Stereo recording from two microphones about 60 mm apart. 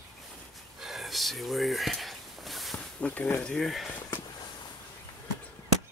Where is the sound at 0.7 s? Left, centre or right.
Centre.